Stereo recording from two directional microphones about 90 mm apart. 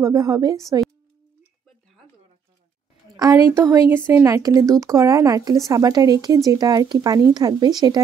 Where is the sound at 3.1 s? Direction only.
45° right (ahead or behind).